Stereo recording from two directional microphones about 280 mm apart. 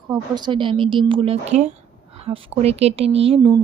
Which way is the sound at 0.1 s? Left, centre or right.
Centre.